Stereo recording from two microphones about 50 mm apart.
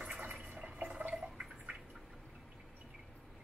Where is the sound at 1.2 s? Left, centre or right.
Centre.